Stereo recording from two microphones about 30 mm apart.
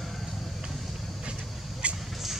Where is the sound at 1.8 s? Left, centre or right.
Right.